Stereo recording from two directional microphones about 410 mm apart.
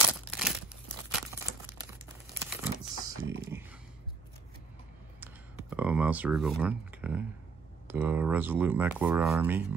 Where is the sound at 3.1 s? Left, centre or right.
Right.